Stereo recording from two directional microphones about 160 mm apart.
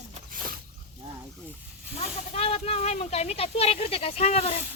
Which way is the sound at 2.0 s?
40° left (ahead or behind).